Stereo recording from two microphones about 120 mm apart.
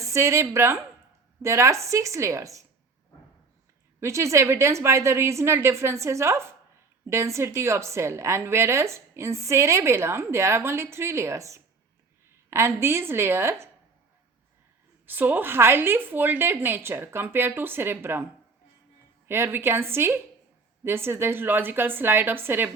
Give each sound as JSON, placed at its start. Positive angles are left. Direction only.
{"t": 0.0, "sound": "a woman's voice", "side_deg": -25}
{"t": 4.0, "sound": "a woman's voice", "side_deg": -25}
{"t": 15.0, "sound": "a woman's voice", "side_deg": -15}
{"t": 19.3, "sound": "a woman's voice", "side_deg": -20}